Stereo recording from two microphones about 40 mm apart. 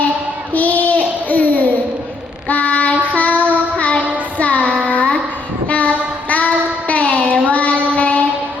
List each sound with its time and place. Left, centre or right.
0.5 s a sound: left
2.5 s child singing: left
7.9 s music: left